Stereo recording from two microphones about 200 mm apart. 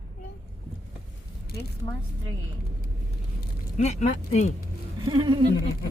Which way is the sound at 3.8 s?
35° left (ahead or behind).